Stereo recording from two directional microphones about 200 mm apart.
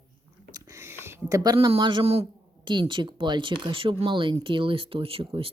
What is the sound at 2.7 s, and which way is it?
Speech, 25° right (ahead or behind).